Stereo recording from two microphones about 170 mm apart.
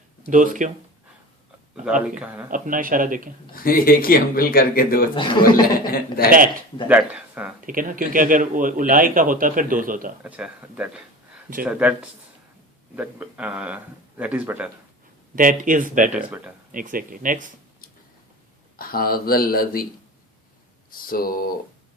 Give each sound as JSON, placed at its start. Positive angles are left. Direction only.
{"t": 0.3, "sound": "speech", "side_deg": -50}
{"t": 2.0, "sound": "speech", "side_deg": -10}
{"t": 2.5, "sound": "speech", "side_deg": -55}
{"t": 3.5, "sound": "speech", "side_deg": 60}
{"t": 5.1, "sound": "speech", "side_deg": 30}
{"t": 5.6, "sound": "speech", "side_deg": 60}
{"t": 6.8, "sound": "speech", "side_deg": -10}
{"t": 7.7, "sound": "speech", "side_deg": -55}
{"t": 10.2, "sound": "speech", "side_deg": -10}
{"t": 13.0, "sound": "speech", "side_deg": -10}
{"t": 15.4, "sound": "speech", "side_deg": -55}
{"t": 18.8, "sound": "speech", "side_deg": 60}
{"t": 20.9, "sound": "speech", "side_deg": 60}